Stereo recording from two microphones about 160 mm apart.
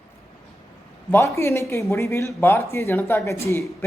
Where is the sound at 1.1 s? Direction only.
15° left (ahead or behind).